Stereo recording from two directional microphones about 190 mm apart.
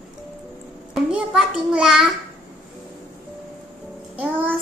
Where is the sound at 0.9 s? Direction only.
5° right (ahead or behind).